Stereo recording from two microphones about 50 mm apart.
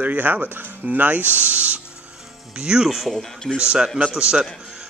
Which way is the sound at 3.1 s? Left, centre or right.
Centre.